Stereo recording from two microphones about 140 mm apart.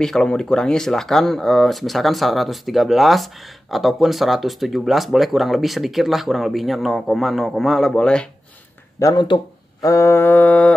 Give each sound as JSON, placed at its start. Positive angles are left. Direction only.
{"t": 0.0, "sound": "speech", "side_deg": 5}
{"t": 9.0, "sound": "speech", "side_deg": 30}